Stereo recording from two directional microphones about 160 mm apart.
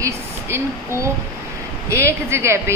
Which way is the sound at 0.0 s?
20° right (ahead or behind).